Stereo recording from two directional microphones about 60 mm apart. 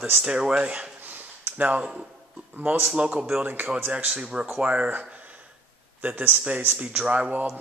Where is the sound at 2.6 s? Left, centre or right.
Right.